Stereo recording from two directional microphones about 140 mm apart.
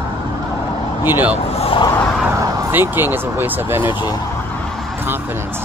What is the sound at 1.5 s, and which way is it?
Vehicle, 45° left (ahead or behind).